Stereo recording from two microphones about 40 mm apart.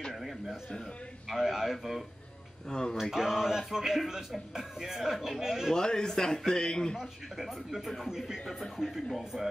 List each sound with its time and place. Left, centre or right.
1.3 s speech: centre
2.7 s a man's voice: centre
3.0 s a sound: centre
4.0 s speech: centre
4.6 s a sound: centre
5.7 s a man's voice: centre
7.0 s speech: centre
8.1 s a sound: centre
8.5 s a man's voice: centre